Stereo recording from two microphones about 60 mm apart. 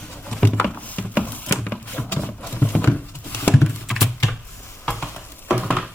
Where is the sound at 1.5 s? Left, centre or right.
Left.